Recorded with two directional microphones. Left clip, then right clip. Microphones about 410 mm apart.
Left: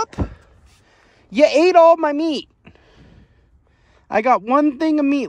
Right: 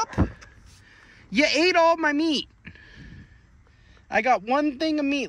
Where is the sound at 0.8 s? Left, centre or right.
Centre.